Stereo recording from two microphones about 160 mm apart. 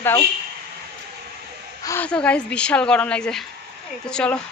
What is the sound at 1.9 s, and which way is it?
Speech, 10° left (ahead or behind).